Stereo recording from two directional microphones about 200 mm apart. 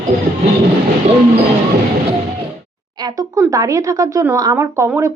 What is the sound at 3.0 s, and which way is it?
Speech, 20° right (ahead or behind).